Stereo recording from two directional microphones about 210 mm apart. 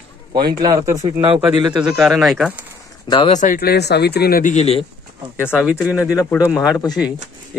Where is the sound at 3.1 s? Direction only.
25° left (ahead or behind).